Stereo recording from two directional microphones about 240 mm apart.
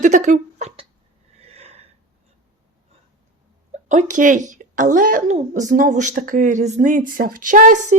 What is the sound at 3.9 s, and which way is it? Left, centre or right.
A woman's voice, right.